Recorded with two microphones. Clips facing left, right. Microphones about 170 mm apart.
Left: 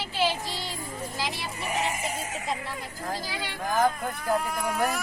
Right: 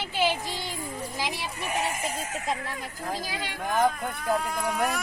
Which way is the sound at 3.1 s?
Centre (ahead or behind).